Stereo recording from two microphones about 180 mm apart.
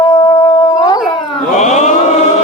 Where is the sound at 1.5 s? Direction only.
40° left (ahead or behind).